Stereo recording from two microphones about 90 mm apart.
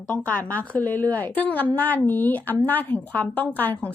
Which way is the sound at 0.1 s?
15° left (ahead or behind).